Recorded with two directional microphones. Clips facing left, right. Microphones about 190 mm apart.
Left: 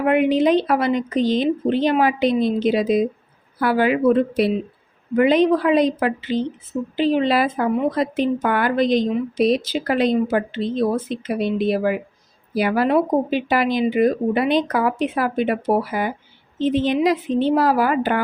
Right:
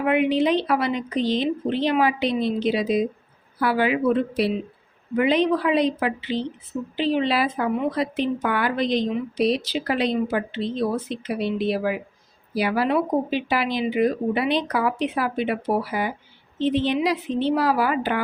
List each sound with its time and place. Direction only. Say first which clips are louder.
0.0 s speech: left 3 dB; 45° left (ahead or behind)